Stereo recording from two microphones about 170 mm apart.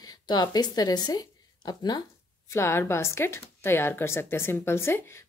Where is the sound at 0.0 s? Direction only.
25° left (ahead or behind).